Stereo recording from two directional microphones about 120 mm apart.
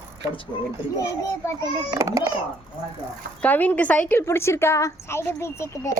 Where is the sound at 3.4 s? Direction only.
15° left (ahead or behind).